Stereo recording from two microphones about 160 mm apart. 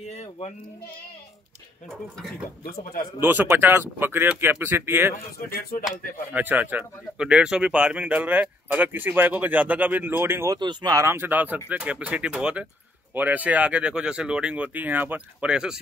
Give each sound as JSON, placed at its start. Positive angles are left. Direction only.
{"t": 0.1, "sound": "sheep", "side_deg": 40}
{"t": 2.6, "sound": "speech", "side_deg": 70}
{"t": 3.2, "sound": "speech", "side_deg": -15}
{"t": 5.5, "sound": "speech", "side_deg": 65}
{"t": 6.3, "sound": "speech", "side_deg": -10}
{"t": 10.6, "sound": "speech", "side_deg": -25}